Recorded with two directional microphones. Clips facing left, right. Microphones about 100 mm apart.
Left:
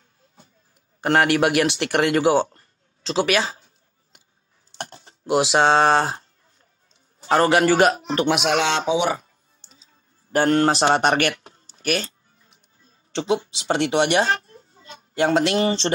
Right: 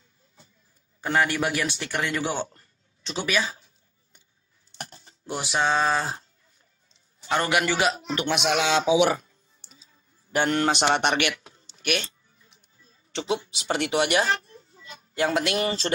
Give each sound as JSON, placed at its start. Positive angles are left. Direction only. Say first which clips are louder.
{"t": 1.0, "sound": "speech", "louder": "left 6 dB", "side_deg": 75}
{"t": 4.9, "sound": "speech", "louder": "left 13 dB", "side_deg": 80}
{"t": 7.2, "sound": "a man's voice", "louder": "left 7 dB", "side_deg": 40}
{"t": 8.6, "sound": "speech", "louder": "even", "side_deg": -5}
{"t": 10.3, "sound": "speech", "louder": "left 5 dB", "side_deg": 40}
{"t": 14.5, "sound": "a sound", "louder": "left 1 dB", "side_deg": 45}
{"t": 14.9, "sound": "speech", "louder": "left 5 dB", "side_deg": 30}